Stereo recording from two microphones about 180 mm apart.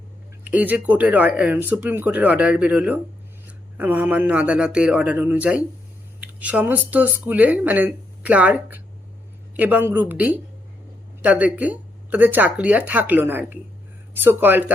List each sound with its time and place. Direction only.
0.4 s speech: 10° right (ahead or behind)